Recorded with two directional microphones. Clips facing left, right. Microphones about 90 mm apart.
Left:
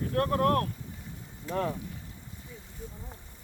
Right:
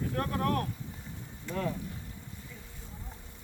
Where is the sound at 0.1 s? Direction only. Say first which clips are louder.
Left 7 dB; 50° left (ahead or behind).